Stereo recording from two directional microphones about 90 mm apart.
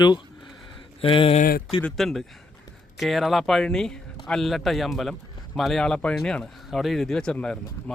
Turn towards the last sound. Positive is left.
turn(degrees=10)  # may be behind; listen again after turning